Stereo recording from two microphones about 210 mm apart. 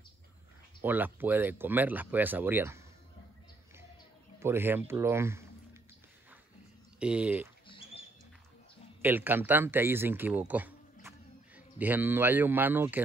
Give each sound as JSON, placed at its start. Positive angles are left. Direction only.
{"t": 0.8, "sound": "speech", "side_deg": -10}
{"t": 4.4, "sound": "speech", "side_deg": -10}
{"t": 7.0, "sound": "speech", "side_deg": -5}
{"t": 7.6, "sound": "rodents", "side_deg": 25}
{"t": 9.0, "sound": "a man's voice", "side_deg": -10}